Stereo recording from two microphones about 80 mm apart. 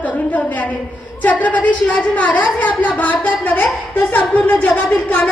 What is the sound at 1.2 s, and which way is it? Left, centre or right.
A woman's voice, centre.